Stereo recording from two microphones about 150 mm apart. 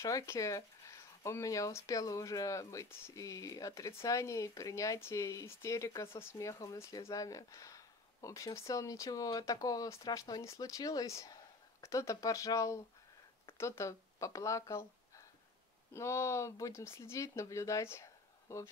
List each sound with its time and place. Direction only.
0.0 s speech: 20° left (ahead or behind)
15.9 s speech: 20° left (ahead or behind)